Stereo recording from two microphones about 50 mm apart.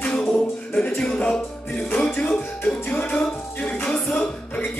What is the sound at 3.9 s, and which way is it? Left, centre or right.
Music, centre.